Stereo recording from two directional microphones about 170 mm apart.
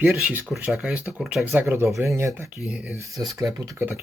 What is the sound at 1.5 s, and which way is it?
Speech, 15° right (ahead or behind).